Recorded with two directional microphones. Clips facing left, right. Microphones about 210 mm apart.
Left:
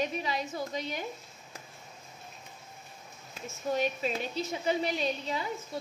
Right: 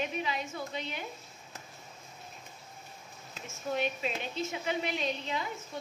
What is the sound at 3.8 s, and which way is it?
A woman's voice, 40° left (ahead or behind).